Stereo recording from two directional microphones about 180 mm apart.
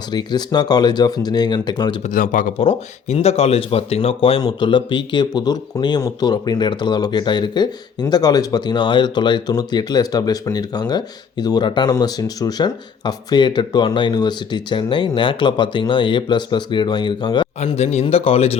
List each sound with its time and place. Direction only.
0.1 s speech: 25° left (ahead or behind)
2.0 s speech: 50° left (ahead or behind)
2.6 s speech: 35° left (ahead or behind)